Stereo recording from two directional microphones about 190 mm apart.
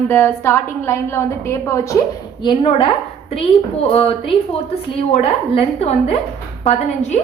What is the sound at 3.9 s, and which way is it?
A woman's voice, 30° left (ahead or behind).